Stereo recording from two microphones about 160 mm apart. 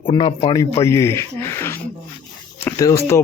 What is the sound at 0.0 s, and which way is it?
Speech, 35° left (ahead or behind).